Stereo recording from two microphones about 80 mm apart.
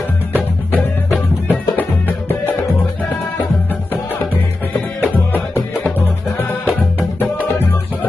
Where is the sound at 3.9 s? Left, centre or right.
Left.